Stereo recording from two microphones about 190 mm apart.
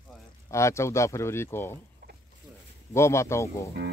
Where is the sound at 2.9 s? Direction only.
15° left (ahead or behind).